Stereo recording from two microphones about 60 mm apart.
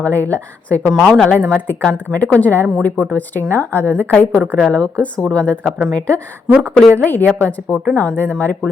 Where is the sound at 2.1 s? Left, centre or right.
Left.